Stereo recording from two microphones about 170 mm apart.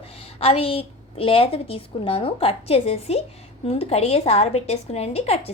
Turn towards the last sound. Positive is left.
turn(degrees=35)  # may be behind; listen again after turning